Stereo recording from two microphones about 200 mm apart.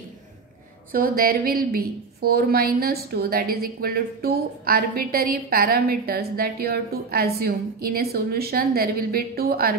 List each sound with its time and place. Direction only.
0.9 s a woman's voice: 45° right (ahead or behind)